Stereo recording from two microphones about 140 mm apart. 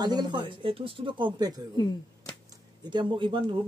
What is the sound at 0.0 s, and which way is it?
Speech, 30° right (ahead or behind).